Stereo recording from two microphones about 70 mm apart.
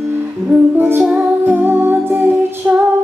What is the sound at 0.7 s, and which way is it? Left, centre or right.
Music, right.